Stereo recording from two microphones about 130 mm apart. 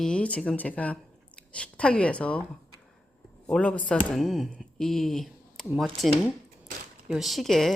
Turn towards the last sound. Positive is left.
turn(degrees=0)  # may be behind; listen again after turning